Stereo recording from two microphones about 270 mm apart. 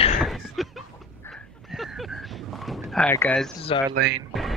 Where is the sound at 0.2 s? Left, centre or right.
Centre.